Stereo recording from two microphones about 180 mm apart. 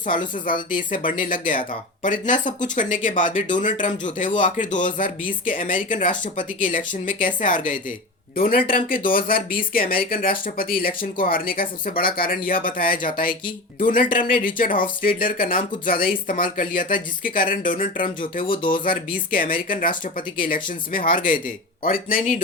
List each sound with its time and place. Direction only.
0.7 s speech: 50° left (ahead or behind)
18.4 s speech: 25° left (ahead or behind)
18.9 s speech: 50° left (ahead or behind)